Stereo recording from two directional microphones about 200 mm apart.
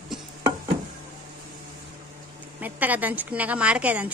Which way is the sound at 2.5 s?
10° right (ahead or behind).